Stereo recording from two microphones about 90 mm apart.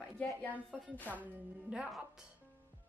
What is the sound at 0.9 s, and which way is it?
Speech, 20° left (ahead or behind).